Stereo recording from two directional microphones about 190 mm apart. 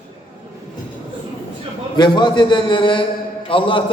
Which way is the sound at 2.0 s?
25° left (ahead or behind).